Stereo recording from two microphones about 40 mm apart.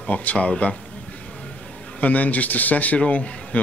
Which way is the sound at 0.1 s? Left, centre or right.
Left.